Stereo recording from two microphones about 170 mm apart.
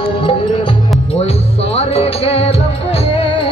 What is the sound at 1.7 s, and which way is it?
Music, 35° left (ahead or behind).